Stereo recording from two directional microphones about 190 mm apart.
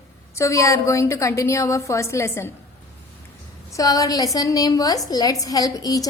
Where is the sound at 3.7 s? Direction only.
20° left (ahead or behind).